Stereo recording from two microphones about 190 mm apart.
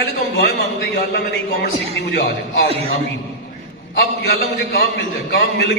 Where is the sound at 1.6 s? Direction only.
60° left (ahead or behind).